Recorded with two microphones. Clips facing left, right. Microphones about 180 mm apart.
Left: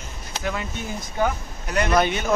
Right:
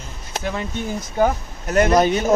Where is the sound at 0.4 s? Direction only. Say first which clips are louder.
Right 2 dB; 30° right (ahead or behind).